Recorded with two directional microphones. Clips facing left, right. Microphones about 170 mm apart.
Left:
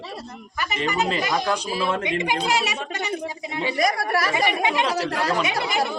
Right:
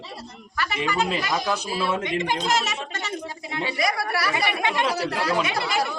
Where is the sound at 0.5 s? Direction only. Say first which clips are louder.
Even; 20° left (ahead or behind).